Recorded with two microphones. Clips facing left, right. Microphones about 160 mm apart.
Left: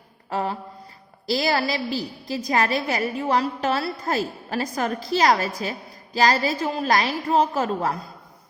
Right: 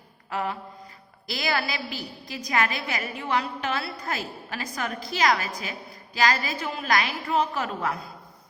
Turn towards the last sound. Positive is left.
turn(degrees=35)  # may be behind; listen again after turning